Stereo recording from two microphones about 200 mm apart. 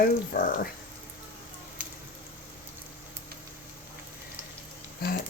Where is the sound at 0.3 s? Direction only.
40° left (ahead or behind).